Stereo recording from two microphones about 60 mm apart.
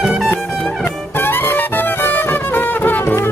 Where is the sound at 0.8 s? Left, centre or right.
Left.